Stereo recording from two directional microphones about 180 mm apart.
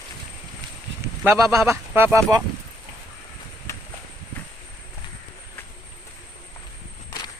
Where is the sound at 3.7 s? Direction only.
15° left (ahead or behind).